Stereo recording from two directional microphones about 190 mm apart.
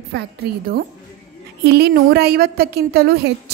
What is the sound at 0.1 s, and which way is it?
A woman's voice, 55° right (ahead or behind).